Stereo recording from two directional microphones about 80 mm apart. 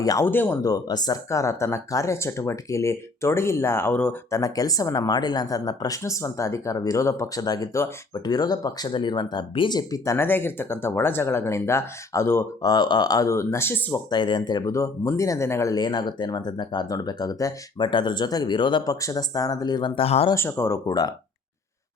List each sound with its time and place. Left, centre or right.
0.2 s speech: left
0.6 s speech: left
1.3 s speech: left
4.3 s speech: left
6.0 s speech: left
10.2 s speech: left
12.6 s speech: left
13.2 s speech: left
14.1 s speech: left
14.6 s speech: left
15.7 s speech: left
18.9 s speech: left
20.3 s speech: left